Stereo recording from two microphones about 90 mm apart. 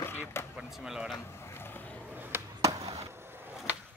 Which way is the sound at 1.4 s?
25° left (ahead or behind).